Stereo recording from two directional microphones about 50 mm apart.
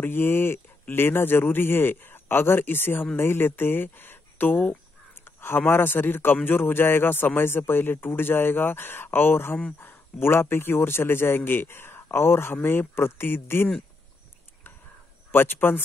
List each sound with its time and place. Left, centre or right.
0.0 s speech: left
5.2 s a sound: left
5.7 s speech: left
15.3 s speech: left